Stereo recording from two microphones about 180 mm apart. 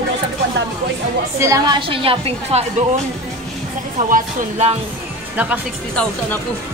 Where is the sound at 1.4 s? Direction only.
20° right (ahead or behind).